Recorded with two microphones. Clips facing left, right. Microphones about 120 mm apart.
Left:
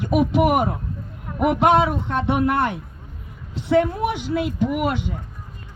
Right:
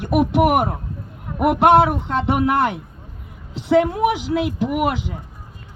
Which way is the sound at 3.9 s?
75° right (ahead or behind).